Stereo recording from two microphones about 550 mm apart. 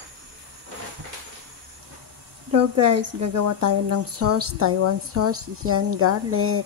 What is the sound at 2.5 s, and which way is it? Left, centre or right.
Speech, right.